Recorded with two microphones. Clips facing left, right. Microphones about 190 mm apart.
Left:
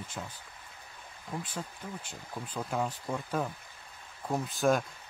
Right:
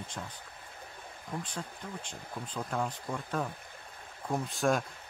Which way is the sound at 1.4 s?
5° left (ahead or behind).